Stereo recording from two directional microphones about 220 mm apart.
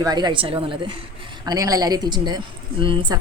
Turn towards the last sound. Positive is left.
turn(degrees=-20)  # may be behind; listen again after turning